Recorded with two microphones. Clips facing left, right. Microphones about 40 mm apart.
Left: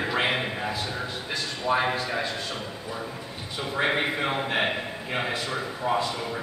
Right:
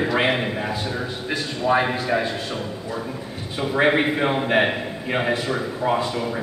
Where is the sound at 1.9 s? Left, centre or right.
Centre.